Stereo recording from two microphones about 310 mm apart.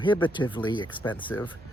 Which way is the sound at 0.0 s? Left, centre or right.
Centre.